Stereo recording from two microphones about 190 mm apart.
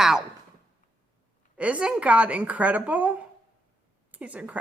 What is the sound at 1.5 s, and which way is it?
A woman's voice, 5° right (ahead or behind).